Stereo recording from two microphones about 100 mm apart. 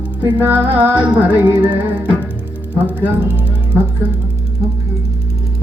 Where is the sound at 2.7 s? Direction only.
15° right (ahead or behind).